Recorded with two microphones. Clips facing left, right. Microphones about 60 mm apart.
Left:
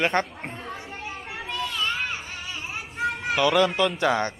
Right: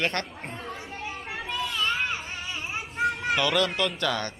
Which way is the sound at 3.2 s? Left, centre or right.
Centre.